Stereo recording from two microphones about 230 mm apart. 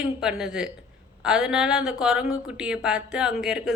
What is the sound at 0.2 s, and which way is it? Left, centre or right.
Speech, centre.